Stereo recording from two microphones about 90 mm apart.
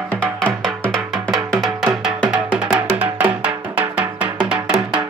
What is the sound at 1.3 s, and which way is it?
Music, centre (ahead or behind).